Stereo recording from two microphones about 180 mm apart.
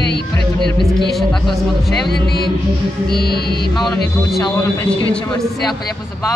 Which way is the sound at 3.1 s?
60° left (ahead or behind).